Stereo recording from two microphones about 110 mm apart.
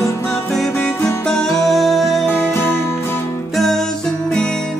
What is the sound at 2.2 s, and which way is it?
Music, 20° left (ahead or behind).